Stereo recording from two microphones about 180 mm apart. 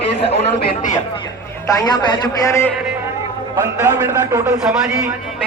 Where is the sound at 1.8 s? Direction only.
20° left (ahead or behind).